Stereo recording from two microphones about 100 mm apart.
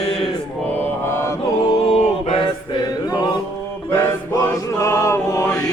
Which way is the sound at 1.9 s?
70° left (ahead or behind).